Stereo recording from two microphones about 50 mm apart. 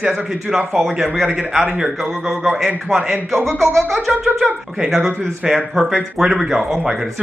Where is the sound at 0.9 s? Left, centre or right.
Centre.